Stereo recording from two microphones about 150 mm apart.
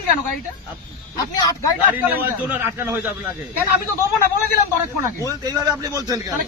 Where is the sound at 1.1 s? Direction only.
25° left (ahead or behind).